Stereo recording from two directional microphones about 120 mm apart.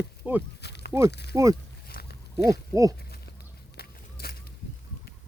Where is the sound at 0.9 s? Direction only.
25° right (ahead or behind).